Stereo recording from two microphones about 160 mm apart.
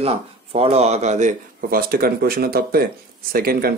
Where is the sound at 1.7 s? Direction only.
65° right (ahead or behind).